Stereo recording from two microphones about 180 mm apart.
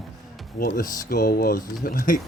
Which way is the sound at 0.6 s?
55° left (ahead or behind).